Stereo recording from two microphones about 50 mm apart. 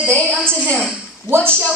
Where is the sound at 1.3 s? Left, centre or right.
Left.